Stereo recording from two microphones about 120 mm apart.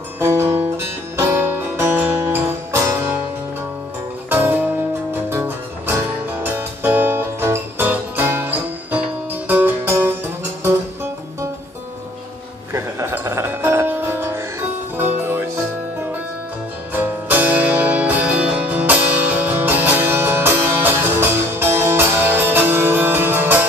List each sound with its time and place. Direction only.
0.2 s music: 25° right (ahead or behind)
4.3 s music: 15° right (ahead or behind)
12.7 s music: 20° right (ahead or behind)
16.9 s music: 15° right (ahead or behind)